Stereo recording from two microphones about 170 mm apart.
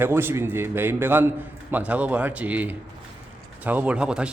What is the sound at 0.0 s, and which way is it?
A man's voice, 15° right (ahead or behind).